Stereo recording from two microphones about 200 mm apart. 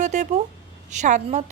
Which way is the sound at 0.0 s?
35° right (ahead or behind).